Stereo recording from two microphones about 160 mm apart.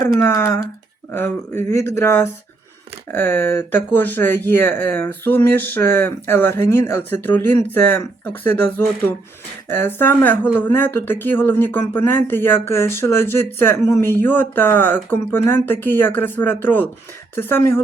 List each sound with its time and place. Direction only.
0.2 s speech: 20° left (ahead or behind)